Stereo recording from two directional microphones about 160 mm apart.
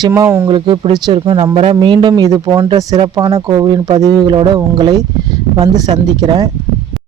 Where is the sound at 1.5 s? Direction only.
40° right (ahead or behind).